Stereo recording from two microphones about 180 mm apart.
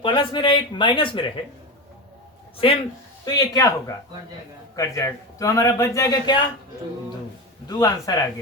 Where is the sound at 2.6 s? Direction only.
30° left (ahead or behind).